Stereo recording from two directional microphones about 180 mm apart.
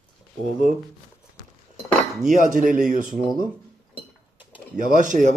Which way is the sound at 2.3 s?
45° right (ahead or behind).